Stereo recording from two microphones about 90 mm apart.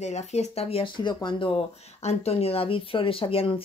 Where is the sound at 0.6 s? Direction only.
80° left.